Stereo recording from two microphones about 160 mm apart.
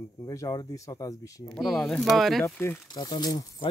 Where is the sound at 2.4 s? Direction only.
15° left (ahead or behind).